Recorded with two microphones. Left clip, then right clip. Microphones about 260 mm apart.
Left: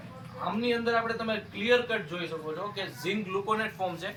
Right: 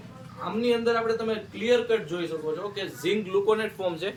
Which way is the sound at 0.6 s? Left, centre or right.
Centre.